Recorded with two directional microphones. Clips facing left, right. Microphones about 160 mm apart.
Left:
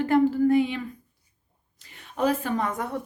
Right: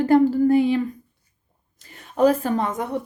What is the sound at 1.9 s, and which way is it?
Speech, 40° right (ahead or behind).